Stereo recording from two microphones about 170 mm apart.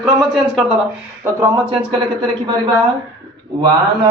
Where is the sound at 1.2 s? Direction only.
15° right (ahead or behind).